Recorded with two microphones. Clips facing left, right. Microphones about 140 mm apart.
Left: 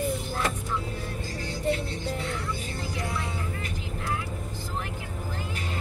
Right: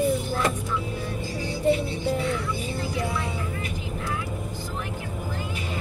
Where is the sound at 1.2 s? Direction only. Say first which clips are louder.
Right 4 dB; 10° right (ahead or behind).